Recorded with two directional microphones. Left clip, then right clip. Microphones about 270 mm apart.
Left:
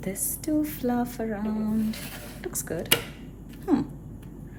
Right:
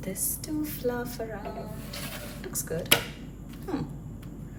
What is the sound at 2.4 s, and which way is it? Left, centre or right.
Tick-tock, left.